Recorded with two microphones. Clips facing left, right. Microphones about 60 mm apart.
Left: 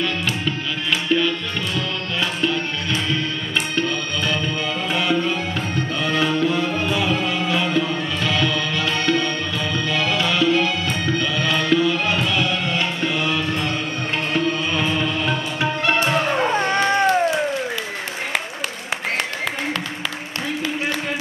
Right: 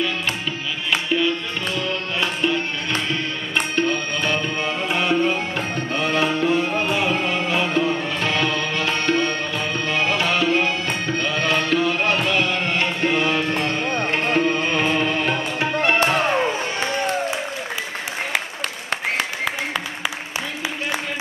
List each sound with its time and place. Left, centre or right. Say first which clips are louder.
1.0 s music: left 2 dB; centre
2.1 s tabla: even; right
2.9 s music: left 2 dB; right
5.9 s tabla: even; right
16.5 s music: left 6 dB; left